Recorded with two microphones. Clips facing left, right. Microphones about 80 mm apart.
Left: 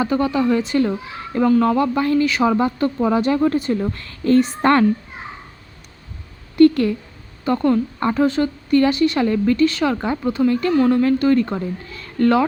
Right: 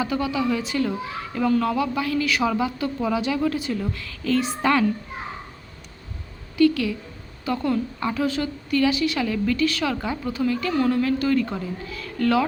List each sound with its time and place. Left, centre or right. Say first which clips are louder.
0.0 s speech: left 5 dB; left
2.2 s a woman's voice: left 5 dB; left
2.6 s a woman's voice: left 6 dB; left
6.6 s a sound: left 6 dB; left
7.4 s a woman's voice: left 6 dB; left
10.4 s speech: left 6 dB; centre
10.9 s a woman's voice: left 6 dB; left